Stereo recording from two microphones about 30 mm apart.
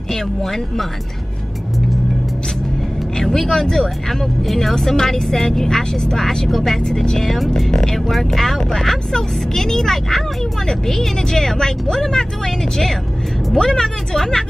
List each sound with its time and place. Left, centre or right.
0.1 s speech: centre
3.2 s speech: centre
7.7 s speech: centre